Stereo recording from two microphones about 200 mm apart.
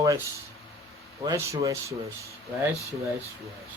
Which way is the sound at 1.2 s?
15° right (ahead or behind).